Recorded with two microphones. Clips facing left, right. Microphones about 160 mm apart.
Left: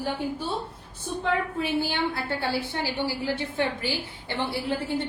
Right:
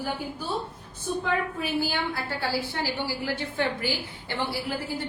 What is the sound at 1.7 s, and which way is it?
A woman's voice, 25° left (ahead or behind).